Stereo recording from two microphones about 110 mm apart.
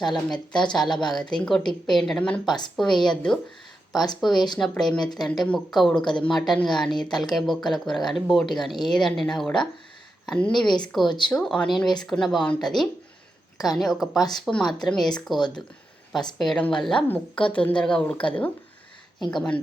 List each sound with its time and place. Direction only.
0.0 s a woman's voice: 5° left (ahead or behind)
4.2 s speech: centre (ahead or behind)
11.0 s speech: 45° left (ahead or behind)
11.3 s speech: 5° left (ahead or behind)
16.4 s a woman's voice: 5° left (ahead or behind)